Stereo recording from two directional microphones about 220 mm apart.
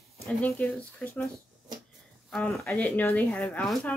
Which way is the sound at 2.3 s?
Centre (ahead or behind).